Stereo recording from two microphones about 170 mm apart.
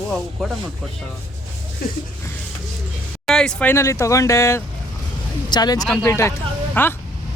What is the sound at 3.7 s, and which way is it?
Speech, 15° left (ahead or behind).